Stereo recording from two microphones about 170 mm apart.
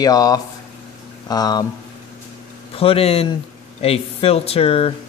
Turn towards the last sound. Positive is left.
turn(degrees=35)  # may be behind; listen again after turning